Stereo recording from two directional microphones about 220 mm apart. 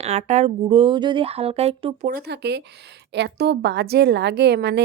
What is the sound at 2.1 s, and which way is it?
A woman's voice, 50° right (ahead or behind).